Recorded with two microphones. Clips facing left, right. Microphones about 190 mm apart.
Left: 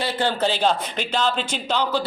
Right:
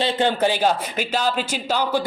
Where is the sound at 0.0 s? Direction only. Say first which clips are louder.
Right 3 dB; 15° right (ahead or behind).